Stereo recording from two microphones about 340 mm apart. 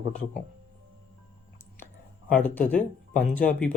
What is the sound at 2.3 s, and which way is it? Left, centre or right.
Speech, centre.